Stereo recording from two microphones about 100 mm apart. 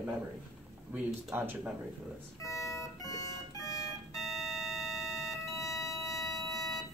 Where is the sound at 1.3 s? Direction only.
20° right (ahead or behind).